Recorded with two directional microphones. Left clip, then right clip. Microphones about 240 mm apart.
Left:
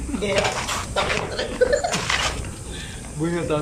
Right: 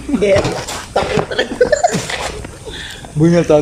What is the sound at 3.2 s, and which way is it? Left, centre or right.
Speech, right.